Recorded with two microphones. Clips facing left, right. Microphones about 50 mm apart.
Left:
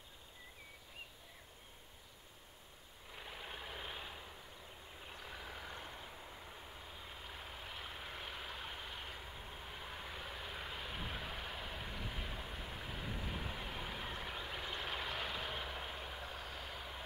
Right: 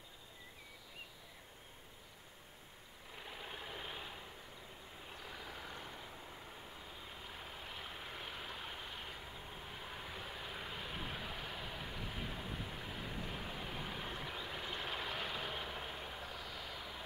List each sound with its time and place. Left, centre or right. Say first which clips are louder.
3.2 s vehicle: even; centre
16.3 s vehicle: even; left
16.7 s vehicle: even; centre